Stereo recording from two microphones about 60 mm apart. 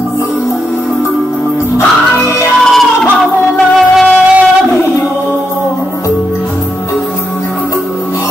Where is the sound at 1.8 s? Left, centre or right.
Left.